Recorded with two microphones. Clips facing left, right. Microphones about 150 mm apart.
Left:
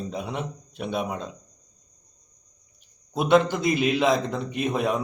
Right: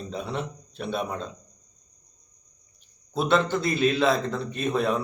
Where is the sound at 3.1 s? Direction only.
15° left (ahead or behind).